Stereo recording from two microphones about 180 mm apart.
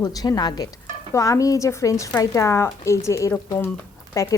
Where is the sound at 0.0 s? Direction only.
20° left (ahead or behind).